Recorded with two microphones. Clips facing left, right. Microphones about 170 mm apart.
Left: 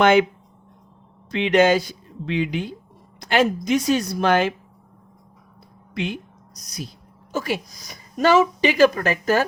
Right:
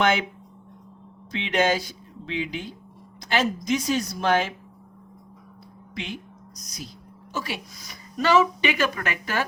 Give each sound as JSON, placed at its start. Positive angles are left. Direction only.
{"t": 1.3, "sound": "a woman's voice", "side_deg": 60}
{"t": 6.0, "sound": "speech", "side_deg": 60}
{"t": 7.3, "sound": "speech", "side_deg": 45}